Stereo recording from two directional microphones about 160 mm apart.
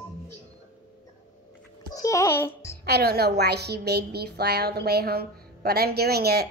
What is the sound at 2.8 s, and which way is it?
A woman's voice, 80° right.